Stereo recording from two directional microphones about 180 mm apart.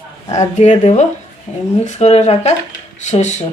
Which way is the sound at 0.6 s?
40° left (ahead or behind).